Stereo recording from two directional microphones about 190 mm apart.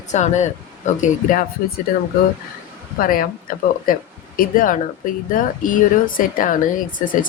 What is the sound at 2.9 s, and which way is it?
Speech, 50° left (ahead or behind).